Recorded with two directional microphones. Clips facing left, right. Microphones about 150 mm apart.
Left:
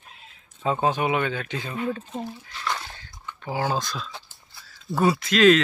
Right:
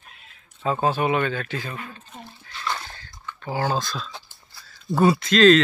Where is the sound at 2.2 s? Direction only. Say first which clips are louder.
Left 5 dB; 15° left (ahead or behind).